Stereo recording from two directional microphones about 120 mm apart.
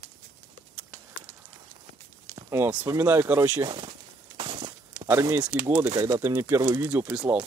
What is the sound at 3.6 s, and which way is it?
Speech, 40° right (ahead or behind).